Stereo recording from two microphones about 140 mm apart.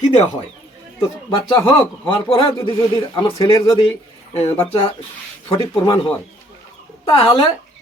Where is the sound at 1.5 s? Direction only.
35° left (ahead or behind).